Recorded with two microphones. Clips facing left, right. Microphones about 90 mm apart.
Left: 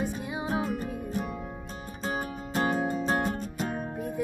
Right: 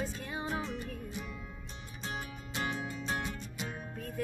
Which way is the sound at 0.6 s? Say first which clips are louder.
Left 8 dB; 45° left (ahead or behind).